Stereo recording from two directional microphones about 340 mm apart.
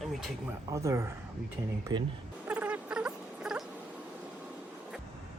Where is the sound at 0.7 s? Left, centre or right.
Centre.